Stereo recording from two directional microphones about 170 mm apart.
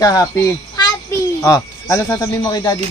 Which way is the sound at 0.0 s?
20° left (ahead or behind).